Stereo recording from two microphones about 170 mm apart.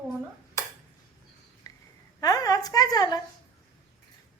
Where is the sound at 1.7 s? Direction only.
20° left (ahead or behind).